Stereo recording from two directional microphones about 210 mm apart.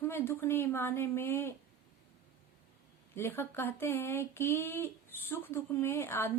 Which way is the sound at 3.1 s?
10° left (ahead or behind).